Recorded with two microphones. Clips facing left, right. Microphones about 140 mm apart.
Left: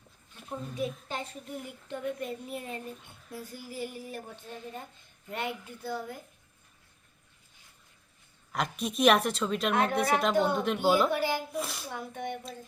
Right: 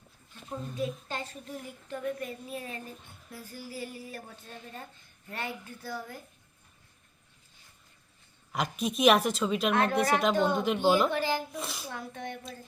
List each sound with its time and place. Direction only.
0.4 s a woman's voice: 10° left (ahead or behind)
2.5 s a woman's voice: centre (ahead or behind)
3.5 s a woman's voice: 15° left (ahead or behind)
5.3 s a woman's voice: 20° left (ahead or behind)
8.5 s a woman's voice: centre (ahead or behind)
11.9 s a woman's voice: 15° left (ahead or behind)